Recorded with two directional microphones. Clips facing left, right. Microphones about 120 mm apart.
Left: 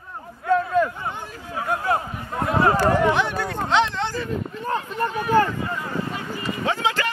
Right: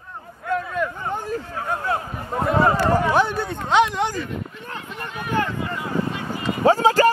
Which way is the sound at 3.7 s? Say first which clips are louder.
Right 3 dB; 15° right (ahead or behind).